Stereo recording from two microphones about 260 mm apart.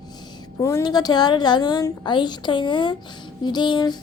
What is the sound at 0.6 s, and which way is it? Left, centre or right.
A woman's voice, centre.